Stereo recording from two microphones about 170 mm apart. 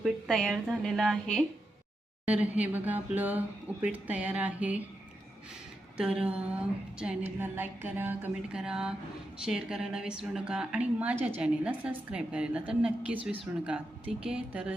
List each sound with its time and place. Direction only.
0.0 s a woman's voice: centre (ahead or behind)
6.0 s a woman's voice: 5° right (ahead or behind)